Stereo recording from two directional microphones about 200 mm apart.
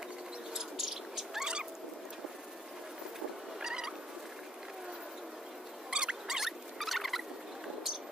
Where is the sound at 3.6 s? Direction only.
5° right (ahead or behind).